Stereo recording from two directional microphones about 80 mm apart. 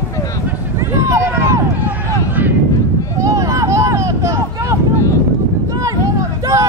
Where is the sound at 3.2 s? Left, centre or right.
Right.